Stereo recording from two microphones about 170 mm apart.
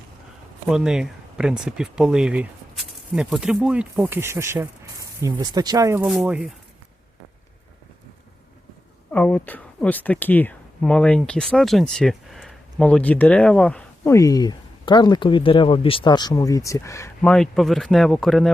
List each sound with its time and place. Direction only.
0.7 s speech: 5° right (ahead or behind)
6.1 s speech: 5° right (ahead or behind)
9.1 s speech: 10° left (ahead or behind)
17.3 s speech: 5° left (ahead or behind)